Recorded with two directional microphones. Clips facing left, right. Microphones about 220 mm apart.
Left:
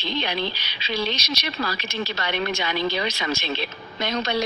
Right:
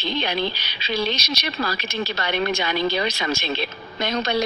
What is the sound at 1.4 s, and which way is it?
Speech, 50° right (ahead or behind).